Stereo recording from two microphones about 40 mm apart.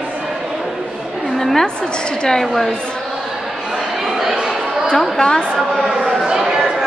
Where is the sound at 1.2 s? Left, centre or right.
Centre.